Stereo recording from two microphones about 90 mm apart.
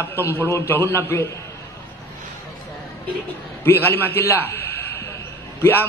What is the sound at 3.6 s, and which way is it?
A man's voice, 25° left (ahead or behind).